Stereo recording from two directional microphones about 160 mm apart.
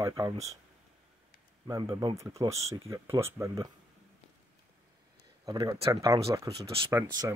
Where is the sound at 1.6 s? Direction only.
20° right (ahead or behind).